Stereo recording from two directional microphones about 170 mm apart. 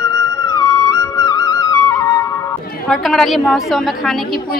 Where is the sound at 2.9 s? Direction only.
Centre (ahead or behind).